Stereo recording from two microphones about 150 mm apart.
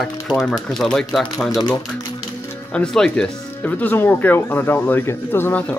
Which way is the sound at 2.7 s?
5° left (ahead or behind).